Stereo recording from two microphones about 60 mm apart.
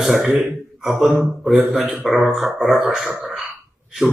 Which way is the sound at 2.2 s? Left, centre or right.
Centre.